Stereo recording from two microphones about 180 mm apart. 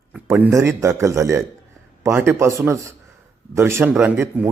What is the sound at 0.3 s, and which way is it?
A man's voice, 15° right (ahead or behind).